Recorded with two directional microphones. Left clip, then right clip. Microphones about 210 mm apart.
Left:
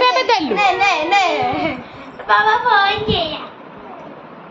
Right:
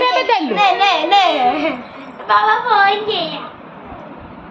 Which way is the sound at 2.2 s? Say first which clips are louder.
Even; 20° left (ahead or behind).